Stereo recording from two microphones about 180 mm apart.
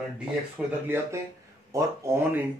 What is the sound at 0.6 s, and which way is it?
Speech, centre (ahead or behind).